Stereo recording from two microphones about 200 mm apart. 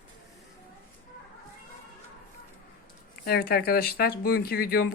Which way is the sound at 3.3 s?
50° left (ahead or behind).